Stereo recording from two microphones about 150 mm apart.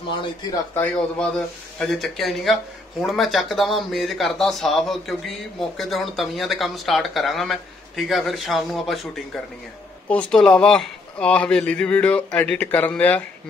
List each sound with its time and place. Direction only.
0.2 s a man's voice: 30° left (ahead or behind)
0.7 s a man's voice: 5° left (ahead or behind)